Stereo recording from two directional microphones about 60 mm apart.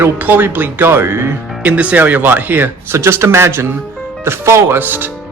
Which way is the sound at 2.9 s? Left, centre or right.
Right.